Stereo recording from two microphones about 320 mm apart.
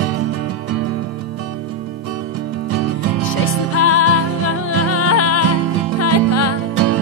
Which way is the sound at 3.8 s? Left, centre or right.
Left.